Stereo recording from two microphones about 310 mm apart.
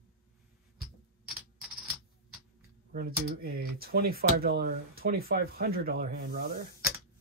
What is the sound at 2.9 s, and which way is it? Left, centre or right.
Speech, right.